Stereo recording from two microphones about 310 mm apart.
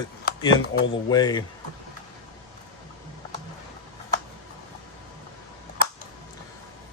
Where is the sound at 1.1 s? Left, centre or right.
Centre.